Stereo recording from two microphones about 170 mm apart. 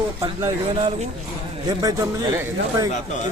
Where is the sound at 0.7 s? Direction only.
35° right (ahead or behind).